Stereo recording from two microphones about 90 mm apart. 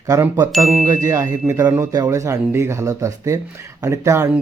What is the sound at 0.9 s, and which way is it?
Speech, 40° right (ahead or behind).